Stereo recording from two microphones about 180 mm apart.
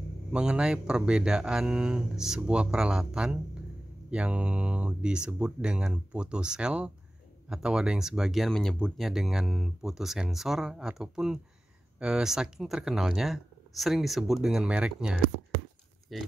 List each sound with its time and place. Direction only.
0.3 s speech: 5° right (ahead or behind)